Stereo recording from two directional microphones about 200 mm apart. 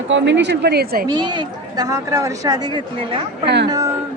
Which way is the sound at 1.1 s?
20° right (ahead or behind).